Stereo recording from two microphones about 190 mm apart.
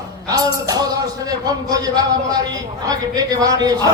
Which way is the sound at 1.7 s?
20° right (ahead or behind).